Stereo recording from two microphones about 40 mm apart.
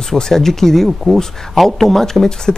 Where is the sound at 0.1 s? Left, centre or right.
Centre.